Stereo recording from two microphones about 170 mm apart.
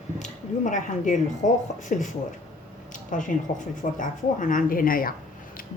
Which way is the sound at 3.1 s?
50° left (ahead or behind).